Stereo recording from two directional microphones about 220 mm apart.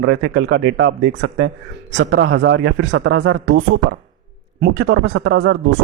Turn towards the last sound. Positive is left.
turn(degrees=-55)  # may be behind; listen again after turning